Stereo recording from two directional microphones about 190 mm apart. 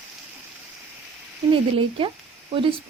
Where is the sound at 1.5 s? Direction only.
25° right (ahead or behind).